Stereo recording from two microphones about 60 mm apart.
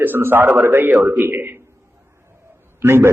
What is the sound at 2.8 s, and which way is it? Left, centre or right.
Speech, right.